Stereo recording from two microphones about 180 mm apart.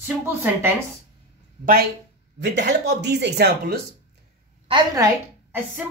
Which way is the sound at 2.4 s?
70° right (ahead or behind).